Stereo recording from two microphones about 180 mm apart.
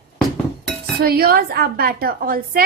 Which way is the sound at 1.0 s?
55° right (ahead or behind).